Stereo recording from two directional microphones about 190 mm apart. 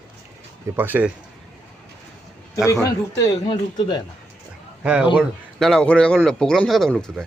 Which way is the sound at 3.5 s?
25° left (ahead or behind).